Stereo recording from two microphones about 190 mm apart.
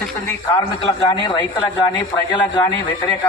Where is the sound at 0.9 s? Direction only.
25° left (ahead or behind).